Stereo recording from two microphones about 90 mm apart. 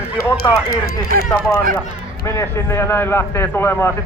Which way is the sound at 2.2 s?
30° left (ahead or behind).